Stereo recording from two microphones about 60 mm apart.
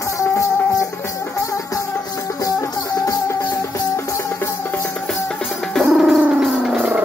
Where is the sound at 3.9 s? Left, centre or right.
Left.